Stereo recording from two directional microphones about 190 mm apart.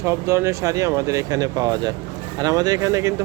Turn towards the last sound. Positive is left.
turn(degrees=-15)  # may be behind; listen again after turning